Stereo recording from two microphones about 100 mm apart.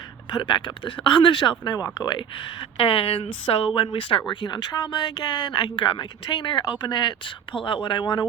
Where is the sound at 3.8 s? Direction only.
65° left (ahead or behind).